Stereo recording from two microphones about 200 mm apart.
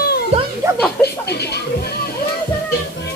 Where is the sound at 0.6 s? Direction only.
15° right (ahead or behind).